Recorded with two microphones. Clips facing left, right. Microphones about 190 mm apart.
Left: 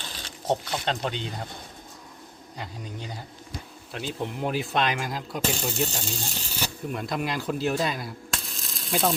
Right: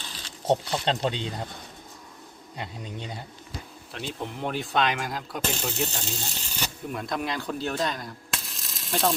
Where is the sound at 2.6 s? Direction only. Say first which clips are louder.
Right 1 dB; 25° right (ahead or behind).